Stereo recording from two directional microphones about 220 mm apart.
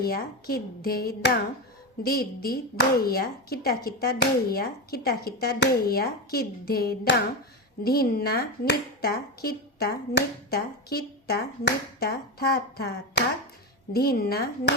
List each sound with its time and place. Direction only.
0.0 s speech: 45° left (ahead or behind)